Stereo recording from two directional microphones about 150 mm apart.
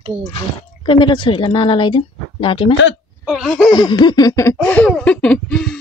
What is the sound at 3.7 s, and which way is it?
Laughter, 30° left (ahead or behind).